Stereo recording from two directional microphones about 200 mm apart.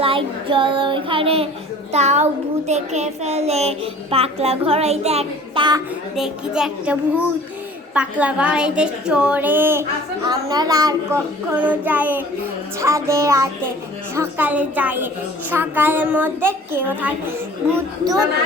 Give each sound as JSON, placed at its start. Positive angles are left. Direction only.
{"t": 0.0, "sound": "child singing", "side_deg": -25}
{"t": 6.1, "sound": "a woman's voice", "side_deg": -5}